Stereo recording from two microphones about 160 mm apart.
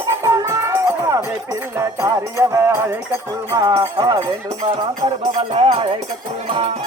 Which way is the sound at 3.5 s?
20° right (ahead or behind).